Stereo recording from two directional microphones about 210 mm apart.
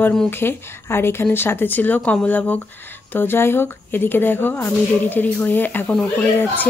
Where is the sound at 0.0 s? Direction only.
5° left (ahead or behind).